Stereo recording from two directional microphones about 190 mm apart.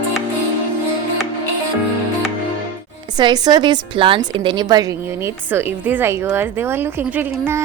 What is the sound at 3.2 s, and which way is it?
A woman's voice, 20° right (ahead or behind).